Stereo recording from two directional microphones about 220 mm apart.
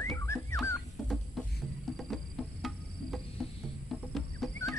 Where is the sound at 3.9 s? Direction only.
Centre (ahead or behind).